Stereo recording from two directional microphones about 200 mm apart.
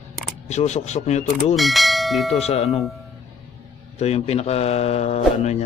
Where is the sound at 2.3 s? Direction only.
30° left (ahead or behind).